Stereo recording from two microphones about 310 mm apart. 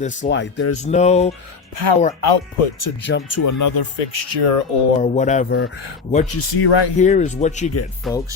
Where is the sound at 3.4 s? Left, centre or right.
Left.